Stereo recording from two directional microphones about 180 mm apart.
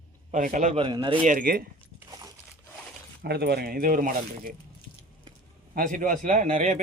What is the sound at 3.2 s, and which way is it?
Speech, 65° right (ahead or behind).